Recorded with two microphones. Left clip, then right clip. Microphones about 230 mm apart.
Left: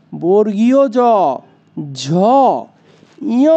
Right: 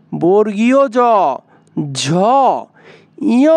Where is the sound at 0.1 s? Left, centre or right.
Right.